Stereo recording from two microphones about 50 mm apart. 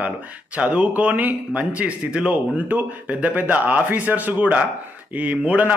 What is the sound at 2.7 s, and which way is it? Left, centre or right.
A man's voice, right.